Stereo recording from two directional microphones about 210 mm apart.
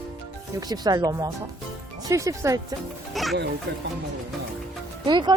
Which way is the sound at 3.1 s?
Centre (ahead or behind).